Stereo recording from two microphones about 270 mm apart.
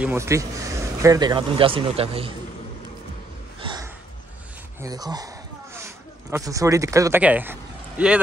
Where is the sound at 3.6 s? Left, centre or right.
Centre.